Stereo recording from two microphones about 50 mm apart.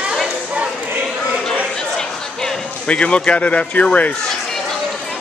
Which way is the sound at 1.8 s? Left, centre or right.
Centre.